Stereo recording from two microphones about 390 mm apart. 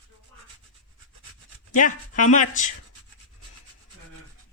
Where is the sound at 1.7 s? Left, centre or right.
Centre.